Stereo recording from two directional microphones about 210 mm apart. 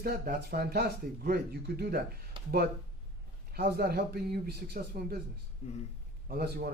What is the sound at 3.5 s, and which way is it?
A man's voice, 50° right (ahead or behind).